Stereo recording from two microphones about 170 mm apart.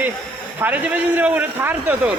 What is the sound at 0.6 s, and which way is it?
Speech, 10° right (ahead or behind).